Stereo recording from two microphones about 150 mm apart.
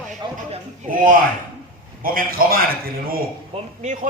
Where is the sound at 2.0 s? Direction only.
75° right (ahead or behind).